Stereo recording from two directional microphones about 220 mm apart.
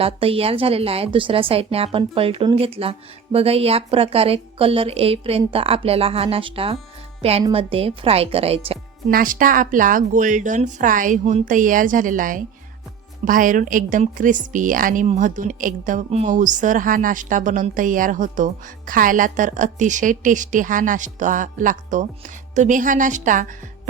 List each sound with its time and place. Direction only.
0.0 s a woman's voice: 25° right (ahead or behind)
9.0 s a woman's voice: 40° right (ahead or behind)